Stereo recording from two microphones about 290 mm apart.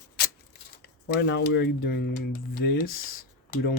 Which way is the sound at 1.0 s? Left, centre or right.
Left.